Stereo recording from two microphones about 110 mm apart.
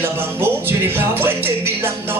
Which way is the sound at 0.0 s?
20° right (ahead or behind).